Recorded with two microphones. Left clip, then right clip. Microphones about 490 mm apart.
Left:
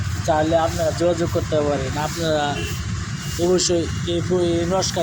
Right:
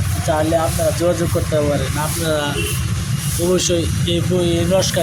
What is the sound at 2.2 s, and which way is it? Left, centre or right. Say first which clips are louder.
Speech: right 1 dB; right.